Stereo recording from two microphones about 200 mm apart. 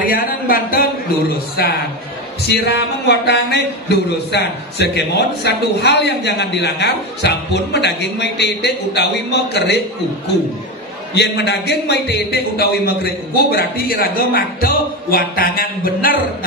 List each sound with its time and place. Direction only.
0.0 s speech: 45° left (ahead or behind)
2.4 s a man's voice: 55° left (ahead or behind)
11.1 s a man's voice: 55° left (ahead or behind)